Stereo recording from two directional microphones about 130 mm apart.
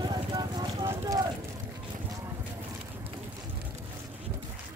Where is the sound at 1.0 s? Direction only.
30° right (ahead or behind).